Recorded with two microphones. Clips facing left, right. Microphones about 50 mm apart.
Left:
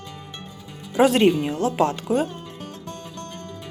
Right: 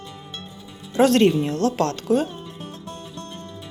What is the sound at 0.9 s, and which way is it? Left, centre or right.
Speech, centre.